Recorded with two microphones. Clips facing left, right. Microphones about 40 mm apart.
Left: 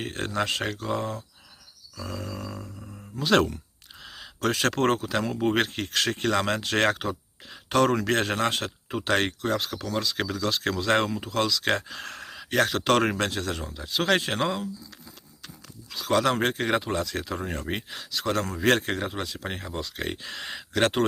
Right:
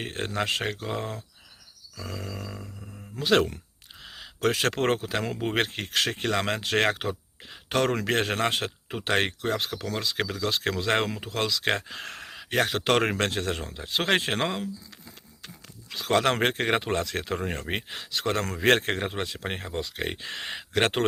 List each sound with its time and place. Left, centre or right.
0.0 s speech: right
4.0 s a sound: centre
4.4 s speech: centre
13.1 s speech: right
15.0 s a sound: right
16.4 s speech: right
19.8 s speech: centre
20.2 s speech: right